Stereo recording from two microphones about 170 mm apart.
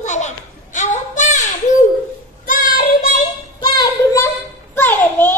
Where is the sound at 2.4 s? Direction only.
55° left (ahead or behind).